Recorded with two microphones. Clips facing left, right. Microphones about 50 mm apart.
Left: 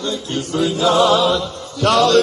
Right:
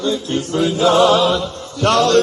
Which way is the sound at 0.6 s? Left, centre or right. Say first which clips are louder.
Right 2 dB; right.